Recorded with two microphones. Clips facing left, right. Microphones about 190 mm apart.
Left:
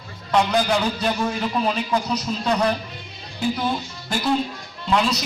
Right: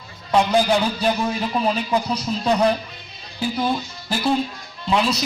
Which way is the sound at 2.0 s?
25° right (ahead or behind).